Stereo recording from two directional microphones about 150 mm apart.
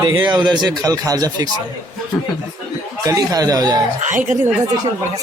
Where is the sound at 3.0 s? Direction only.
25° right (ahead or behind).